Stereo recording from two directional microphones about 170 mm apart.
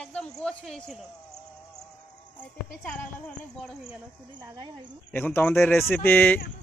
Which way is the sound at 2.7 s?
5° left (ahead or behind).